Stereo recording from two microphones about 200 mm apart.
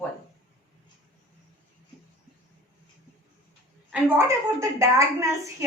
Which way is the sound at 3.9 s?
15° right (ahead or behind).